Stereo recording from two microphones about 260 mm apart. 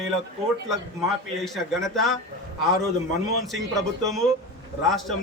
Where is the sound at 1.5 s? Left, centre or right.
Centre.